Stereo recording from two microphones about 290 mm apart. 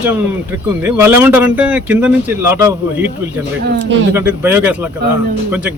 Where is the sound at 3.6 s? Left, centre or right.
Right.